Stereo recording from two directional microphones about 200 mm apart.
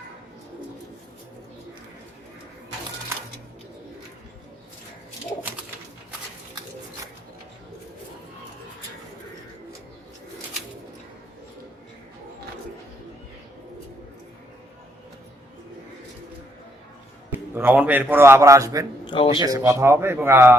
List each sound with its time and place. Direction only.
17.3 s a man's voice: 10° right (ahead or behind)
19.0 s speech: 25° left (ahead or behind)
19.4 s a man's voice: 15° right (ahead or behind)